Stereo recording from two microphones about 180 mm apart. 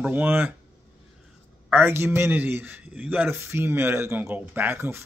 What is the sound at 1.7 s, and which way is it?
Speech, 10° right (ahead or behind).